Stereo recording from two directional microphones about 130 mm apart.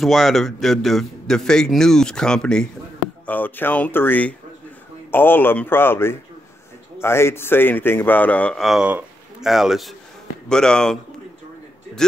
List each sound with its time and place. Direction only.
0.0 s a man's voice: centre (ahead or behind)